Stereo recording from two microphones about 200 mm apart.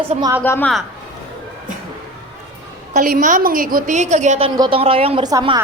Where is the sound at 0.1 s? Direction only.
20° right (ahead or behind).